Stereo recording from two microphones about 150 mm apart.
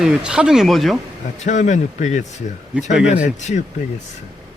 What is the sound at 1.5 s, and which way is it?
Speech, 55° left (ahead or behind).